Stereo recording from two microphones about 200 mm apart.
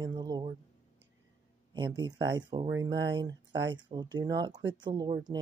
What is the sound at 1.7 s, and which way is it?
Speech, 20° right (ahead or behind).